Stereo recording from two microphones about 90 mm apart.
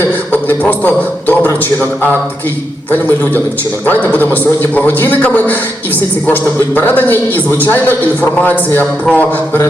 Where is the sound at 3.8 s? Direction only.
20° left (ahead or behind).